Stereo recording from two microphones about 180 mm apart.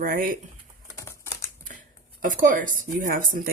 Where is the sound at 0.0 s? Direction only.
50° right (ahead or behind).